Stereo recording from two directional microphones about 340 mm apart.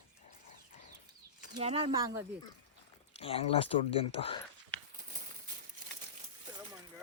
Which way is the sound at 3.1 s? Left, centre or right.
Centre.